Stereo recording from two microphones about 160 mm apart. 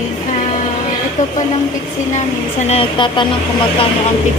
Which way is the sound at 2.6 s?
40° left (ahead or behind).